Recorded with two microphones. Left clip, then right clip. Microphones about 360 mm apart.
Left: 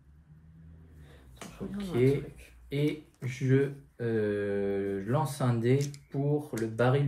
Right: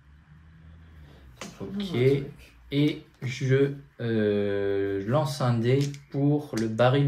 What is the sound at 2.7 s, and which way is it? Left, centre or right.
Speech, centre.